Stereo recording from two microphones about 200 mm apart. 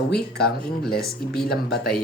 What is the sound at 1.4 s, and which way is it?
Speech, 55° left (ahead or behind).